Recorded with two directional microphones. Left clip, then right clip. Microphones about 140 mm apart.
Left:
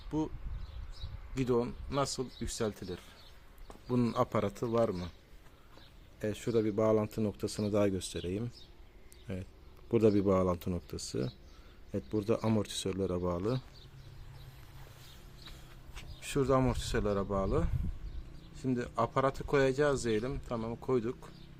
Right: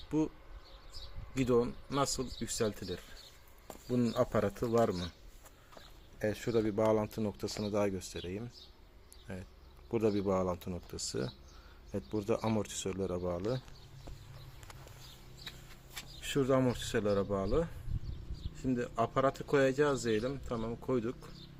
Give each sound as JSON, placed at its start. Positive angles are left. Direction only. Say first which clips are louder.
{"t": 0.1, "sound": "speech", "louder": "right 2 dB", "side_deg": -10}
{"t": 1.4, "sound": "speech", "louder": "right 2 dB", "side_deg": 0}
{"t": 3.8, "sound": "speech", "louder": "even", "side_deg": 30}
{"t": 4.3, "sound": "speech", "louder": "right 1 dB", "side_deg": 15}
{"t": 4.8, "sound": "speech", "louder": "even", "side_deg": 0}
{"t": 6.5, "sound": "speech", "louder": "left 2 dB", "side_deg": 30}
{"t": 7.4, "sound": "speech", "louder": "left 3 dB", "side_deg": 75}
{"t": 9.2, "sound": "speech", "louder": "left 3 dB", "side_deg": 75}
{"t": 11.9, "sound": "speech", "louder": "left 2 dB", "side_deg": 40}
{"t": 16.2, "sound": "speech", "louder": "left 1 dB", "side_deg": 15}